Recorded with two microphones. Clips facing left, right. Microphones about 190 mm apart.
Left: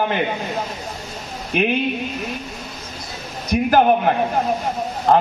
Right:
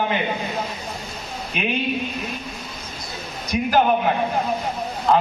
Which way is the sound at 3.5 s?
55° left (ahead or behind).